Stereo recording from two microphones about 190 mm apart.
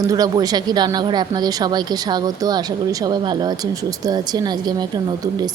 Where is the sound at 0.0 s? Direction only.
20° right (ahead or behind).